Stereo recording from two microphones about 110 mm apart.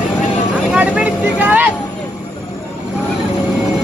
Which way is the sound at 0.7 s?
10° right (ahead or behind).